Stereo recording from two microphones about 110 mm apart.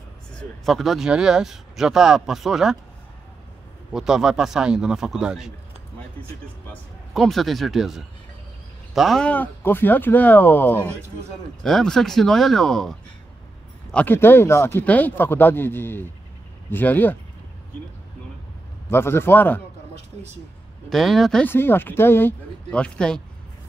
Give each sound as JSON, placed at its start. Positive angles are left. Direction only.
{"t": 0.4, "sound": "speech", "side_deg": 0}
{"t": 3.9, "sound": "speech", "side_deg": -5}
{"t": 7.2, "sound": "speech", "side_deg": 0}
{"t": 9.3, "sound": "speech", "side_deg": 15}
{"t": 11.6, "sound": "speech", "side_deg": 5}
{"t": 13.9, "sound": "speech", "side_deg": 20}
{"t": 18.9, "sound": "speech", "side_deg": 20}
{"t": 20.9, "sound": "speech", "side_deg": 0}
{"t": 21.5, "sound": "speech", "side_deg": 20}
{"t": 22.7, "sound": "speech", "side_deg": 10}